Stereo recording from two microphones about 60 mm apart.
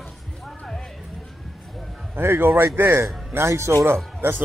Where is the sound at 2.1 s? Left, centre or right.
Right.